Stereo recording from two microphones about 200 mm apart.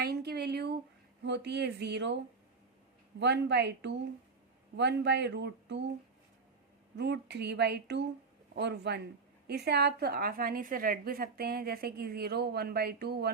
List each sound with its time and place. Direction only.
0.0 s a sound: 50° right (ahead or behind)
1.2 s speech: 60° right (ahead or behind)
3.2 s speech: 60° right (ahead or behind)
6.9 s a woman's voice: 60° right (ahead or behind)